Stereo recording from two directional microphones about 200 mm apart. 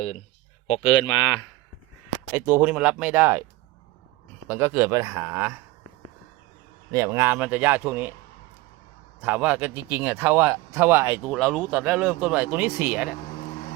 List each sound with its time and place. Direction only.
0.7 s speech: 25° left (ahead or behind)
2.3 s speech: 10° right (ahead or behind)
4.4 s speech: 10° right (ahead or behind)
6.9 s speech: 15° right (ahead or behind)
9.2 s speech: 10° right (ahead or behind)